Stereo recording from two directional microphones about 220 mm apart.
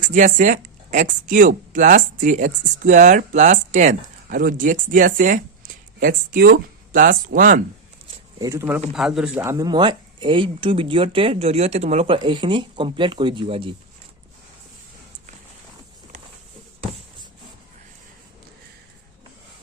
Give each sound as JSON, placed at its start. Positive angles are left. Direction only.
{"t": 0.0, "sound": "speech", "side_deg": -35}
{"t": 8.4, "sound": "speech", "side_deg": -15}